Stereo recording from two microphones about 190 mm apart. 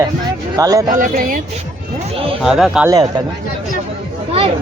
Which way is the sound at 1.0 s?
45° right (ahead or behind).